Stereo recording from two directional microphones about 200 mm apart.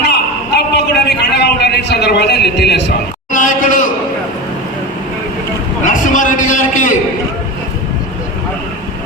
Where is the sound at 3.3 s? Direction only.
40° left (ahead or behind).